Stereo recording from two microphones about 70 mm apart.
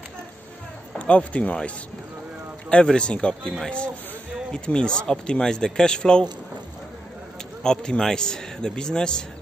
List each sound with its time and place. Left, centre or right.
0.9 s speech: centre
2.7 s speech: centre
7.6 s speech: centre